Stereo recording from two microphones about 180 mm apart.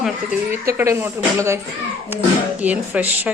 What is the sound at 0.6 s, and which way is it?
Speech, 15° right (ahead or behind).